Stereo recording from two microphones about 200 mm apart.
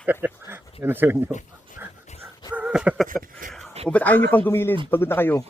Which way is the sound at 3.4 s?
40° right (ahead or behind).